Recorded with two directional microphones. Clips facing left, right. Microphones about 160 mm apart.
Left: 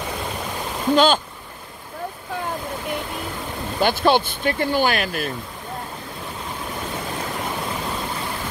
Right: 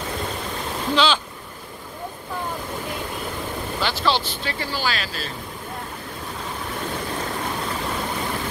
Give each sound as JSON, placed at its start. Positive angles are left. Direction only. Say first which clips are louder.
{"t": 0.9, "sound": "speech", "louder": "left 4 dB", "side_deg": 45}
{"t": 3.8, "sound": "speech", "louder": "left 6 dB", "side_deg": 50}